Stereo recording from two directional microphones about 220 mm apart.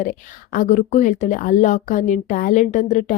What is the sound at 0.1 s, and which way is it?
Speech, 35° left (ahead or behind).